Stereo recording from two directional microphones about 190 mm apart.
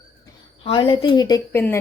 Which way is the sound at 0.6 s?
30° left (ahead or behind).